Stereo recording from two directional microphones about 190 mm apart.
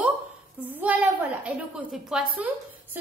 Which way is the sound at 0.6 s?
10° right (ahead or behind).